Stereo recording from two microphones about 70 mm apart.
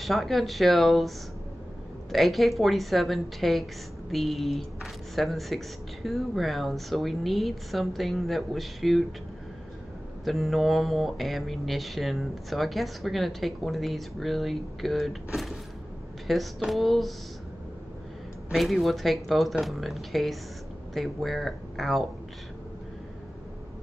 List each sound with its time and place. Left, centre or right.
0.0 s speech: centre
2.1 s speech: centre
10.2 s speech: centre
18.5 s speech: centre